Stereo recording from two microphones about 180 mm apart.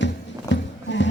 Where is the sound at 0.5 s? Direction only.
90° left.